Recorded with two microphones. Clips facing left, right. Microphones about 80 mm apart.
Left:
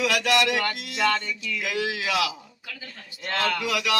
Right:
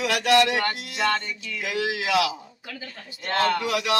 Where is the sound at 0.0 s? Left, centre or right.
Right.